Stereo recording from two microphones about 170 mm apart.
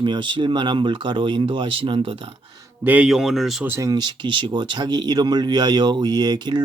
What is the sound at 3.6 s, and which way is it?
Speech, 15° right (ahead or behind).